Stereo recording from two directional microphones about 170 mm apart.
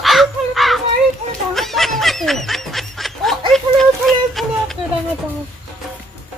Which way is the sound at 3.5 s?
Centre (ahead or behind).